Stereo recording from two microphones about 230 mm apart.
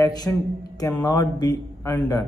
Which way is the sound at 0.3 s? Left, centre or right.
Centre.